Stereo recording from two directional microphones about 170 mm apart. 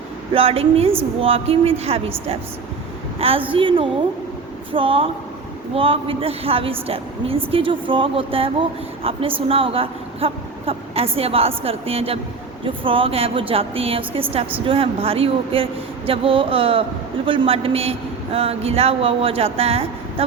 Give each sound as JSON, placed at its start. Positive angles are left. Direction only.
{"t": 0.3, "sound": "a woman's voice", "side_deg": -35}